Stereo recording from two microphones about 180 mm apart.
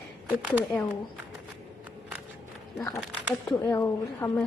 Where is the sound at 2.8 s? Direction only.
15° left (ahead or behind).